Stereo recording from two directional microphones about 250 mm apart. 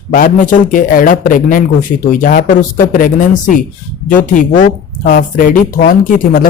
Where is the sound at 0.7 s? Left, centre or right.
Left.